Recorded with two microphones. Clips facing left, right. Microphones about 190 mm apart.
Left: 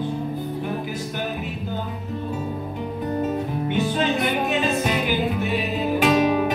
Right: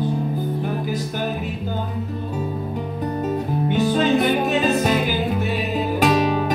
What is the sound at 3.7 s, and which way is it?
Music, 40° right (ahead or behind).